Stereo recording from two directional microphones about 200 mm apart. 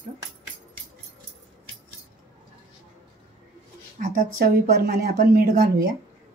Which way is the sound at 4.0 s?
45° right (ahead or behind).